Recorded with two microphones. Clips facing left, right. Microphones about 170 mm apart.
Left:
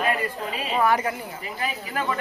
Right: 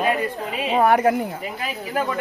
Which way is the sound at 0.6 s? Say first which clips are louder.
Right 6 dB; 60° right (ahead or behind).